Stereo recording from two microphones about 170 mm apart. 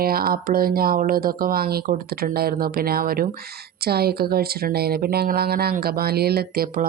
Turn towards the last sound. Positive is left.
turn(degrees=-60)  # may be behind; listen again after turning